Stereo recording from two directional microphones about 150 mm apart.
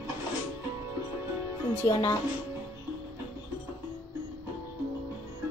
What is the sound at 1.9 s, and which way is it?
Speech, 25° left (ahead or behind).